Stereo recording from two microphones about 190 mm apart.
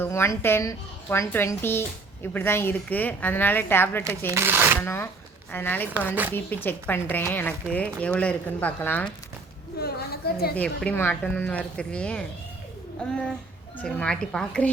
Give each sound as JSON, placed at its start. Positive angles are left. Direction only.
{"t": 0.0, "sound": "a woman's voice", "side_deg": 15}
{"t": 4.3, "sound": "speech", "side_deg": -10}
{"t": 4.8, "sound": "a woman's voice", "side_deg": 10}
{"t": 9.7, "sound": "a woman's voice", "side_deg": 55}
{"t": 10.6, "sound": "speech", "side_deg": 5}